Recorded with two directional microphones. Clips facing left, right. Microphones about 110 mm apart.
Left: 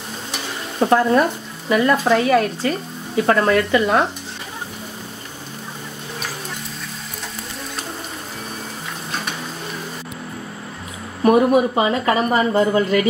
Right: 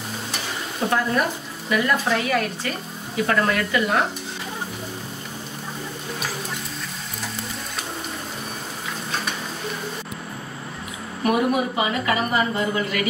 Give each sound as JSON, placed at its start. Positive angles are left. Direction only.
{"t": 0.7, "sound": "a woman's voice", "side_deg": 35}
{"t": 11.2, "sound": "a woman's voice", "side_deg": 35}